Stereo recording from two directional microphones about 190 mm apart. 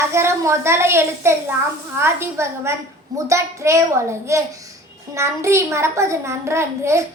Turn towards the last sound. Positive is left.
turn(degrees=-15)  # may be behind; listen again after turning